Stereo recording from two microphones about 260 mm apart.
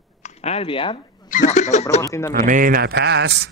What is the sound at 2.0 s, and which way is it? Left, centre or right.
Speech, centre.